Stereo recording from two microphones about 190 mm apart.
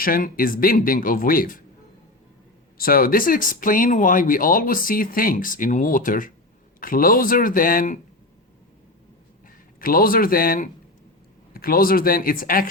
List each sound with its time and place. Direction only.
0.0 s speech: 50° left (ahead or behind)
2.7 s speech: 50° left (ahead or behind)
9.8 s speech: 50° left (ahead or behind)